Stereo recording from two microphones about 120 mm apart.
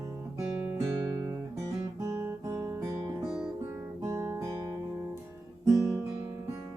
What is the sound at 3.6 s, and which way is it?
Guitar, 20° right (ahead or behind).